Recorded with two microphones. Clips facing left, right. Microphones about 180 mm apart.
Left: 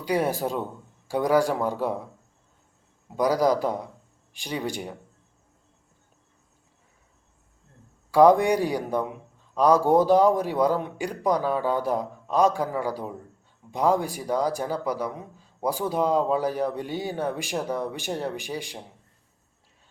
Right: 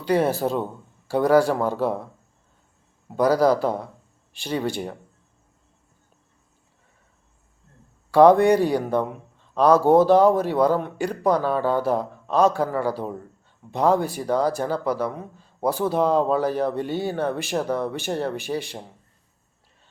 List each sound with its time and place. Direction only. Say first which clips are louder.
0.0 s a man's voice: right 4 dB; 15° left (ahead or behind)
3.2 s a man's voice: right 3 dB; 15° left (ahead or behind)
8.3 s a man's voice: right 4 dB; 15° left (ahead or behind)